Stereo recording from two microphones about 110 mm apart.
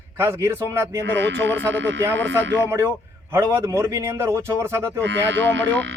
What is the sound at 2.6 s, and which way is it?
A man's voice, 25° right (ahead or behind).